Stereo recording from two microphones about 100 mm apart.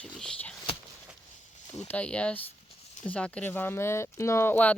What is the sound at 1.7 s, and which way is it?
Speech, 15° left (ahead or behind).